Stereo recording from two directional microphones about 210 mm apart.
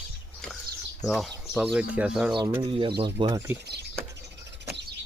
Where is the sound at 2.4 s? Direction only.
20° right (ahead or behind).